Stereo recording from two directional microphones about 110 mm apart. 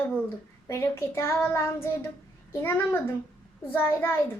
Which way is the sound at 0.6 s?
20° left (ahead or behind).